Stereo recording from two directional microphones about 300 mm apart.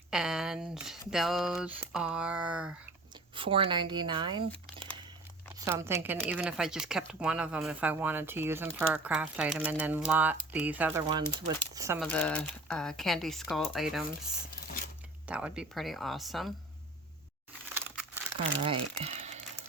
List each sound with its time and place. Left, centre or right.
0.1 s speech: centre
3.3 s speech: centre
11.9 s speech: centre
15.3 s speech: centre
17.7 s crumpling: centre
18.6 s speech: centre